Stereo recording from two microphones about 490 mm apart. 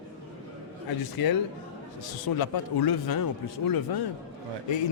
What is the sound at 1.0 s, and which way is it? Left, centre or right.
Speech, left.